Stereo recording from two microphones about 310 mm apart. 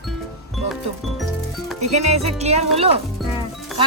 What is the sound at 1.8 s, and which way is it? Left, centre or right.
Music, right.